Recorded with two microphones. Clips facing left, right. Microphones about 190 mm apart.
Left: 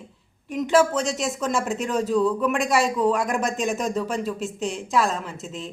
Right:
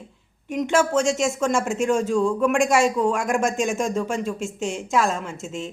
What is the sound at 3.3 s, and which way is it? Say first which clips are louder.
Speech: right 3 dB; 45° right (ahead or behind).